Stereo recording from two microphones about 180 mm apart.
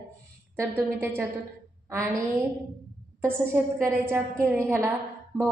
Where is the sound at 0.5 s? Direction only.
15° right (ahead or behind).